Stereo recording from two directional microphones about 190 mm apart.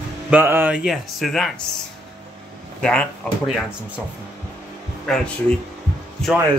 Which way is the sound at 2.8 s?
5° left (ahead or behind).